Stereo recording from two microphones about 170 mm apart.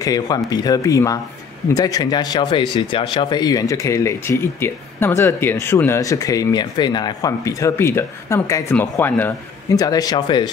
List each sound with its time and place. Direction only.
0.0 s speech: 20° left (ahead or behind)